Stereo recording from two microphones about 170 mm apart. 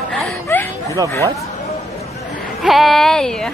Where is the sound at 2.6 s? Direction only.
Centre (ahead or behind).